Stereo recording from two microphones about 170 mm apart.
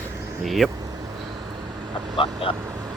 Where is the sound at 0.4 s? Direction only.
Centre (ahead or behind).